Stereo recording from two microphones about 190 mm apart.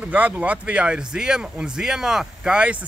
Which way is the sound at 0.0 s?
5° right (ahead or behind).